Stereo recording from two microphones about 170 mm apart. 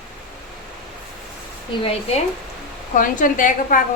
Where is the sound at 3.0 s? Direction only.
50° left (ahead or behind).